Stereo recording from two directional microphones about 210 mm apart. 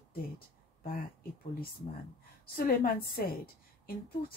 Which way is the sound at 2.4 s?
45° left (ahead or behind).